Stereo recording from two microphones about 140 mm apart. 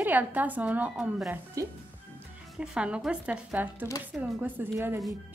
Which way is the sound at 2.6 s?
10° right (ahead or behind).